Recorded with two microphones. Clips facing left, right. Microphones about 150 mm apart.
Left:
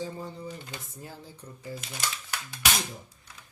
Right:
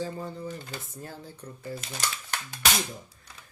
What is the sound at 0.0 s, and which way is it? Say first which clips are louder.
Speech: right 2 dB; 15° left (ahead or behind).